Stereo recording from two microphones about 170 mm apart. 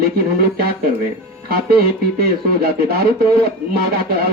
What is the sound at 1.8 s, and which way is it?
Speech, 65° right (ahead or behind).